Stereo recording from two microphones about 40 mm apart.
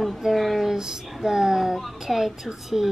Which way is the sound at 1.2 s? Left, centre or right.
Centre.